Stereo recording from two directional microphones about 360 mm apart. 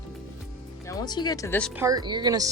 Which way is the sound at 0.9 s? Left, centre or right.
Centre.